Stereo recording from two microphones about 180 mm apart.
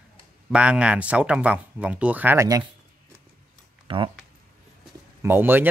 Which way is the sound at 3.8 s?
30° right (ahead or behind).